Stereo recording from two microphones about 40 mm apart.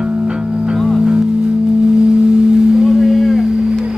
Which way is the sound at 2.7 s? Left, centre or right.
Centre.